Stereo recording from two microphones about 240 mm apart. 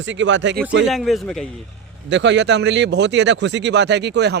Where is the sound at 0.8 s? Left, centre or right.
Centre.